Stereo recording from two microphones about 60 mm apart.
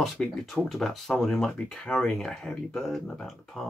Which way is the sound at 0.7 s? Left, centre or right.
Centre.